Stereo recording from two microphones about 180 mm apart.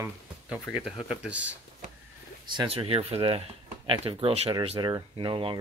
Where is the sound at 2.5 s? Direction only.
30° right (ahead or behind).